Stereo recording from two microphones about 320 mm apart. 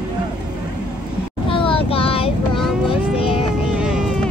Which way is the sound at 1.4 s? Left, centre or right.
Centre.